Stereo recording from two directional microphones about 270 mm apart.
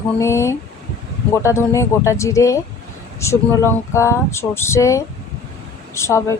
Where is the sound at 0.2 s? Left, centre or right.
Centre.